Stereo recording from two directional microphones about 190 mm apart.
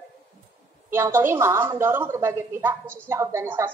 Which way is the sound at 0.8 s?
15° right (ahead or behind).